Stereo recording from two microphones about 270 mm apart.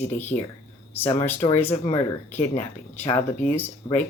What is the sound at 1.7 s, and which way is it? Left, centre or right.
Speech, left.